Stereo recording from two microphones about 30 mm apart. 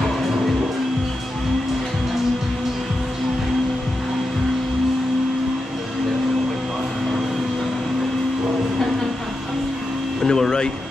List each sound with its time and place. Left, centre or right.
10.2 s music: centre